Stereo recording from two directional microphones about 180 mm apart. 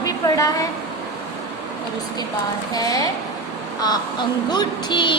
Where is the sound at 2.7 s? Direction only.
20° left (ahead or behind).